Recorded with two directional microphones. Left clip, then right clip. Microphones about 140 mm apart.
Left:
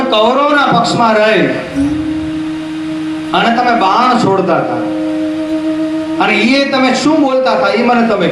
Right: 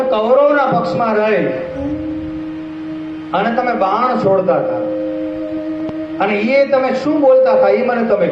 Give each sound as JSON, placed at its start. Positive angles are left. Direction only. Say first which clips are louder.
{"t": 0.1, "sound": "a man's voice", "louder": "left 2 dB", "side_deg": -15}
{"t": 6.1, "sound": "a man's voice", "louder": "left 2 dB", "side_deg": -15}